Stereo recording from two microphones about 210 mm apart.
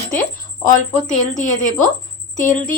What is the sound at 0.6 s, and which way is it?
Speech, 35° left (ahead or behind).